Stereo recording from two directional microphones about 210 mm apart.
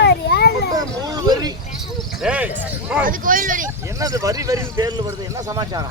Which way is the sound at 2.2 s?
5° right (ahead or behind).